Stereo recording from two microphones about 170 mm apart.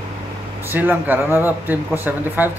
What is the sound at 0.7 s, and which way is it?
Speech, 10° right (ahead or behind).